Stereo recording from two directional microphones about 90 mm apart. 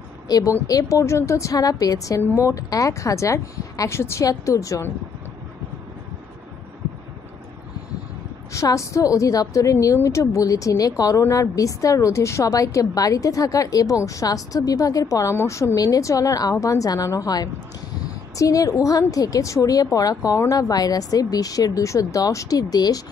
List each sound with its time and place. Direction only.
0.3 s a woman's voice: 40° left (ahead or behind)
8.5 s a woman's voice: 35° left (ahead or behind)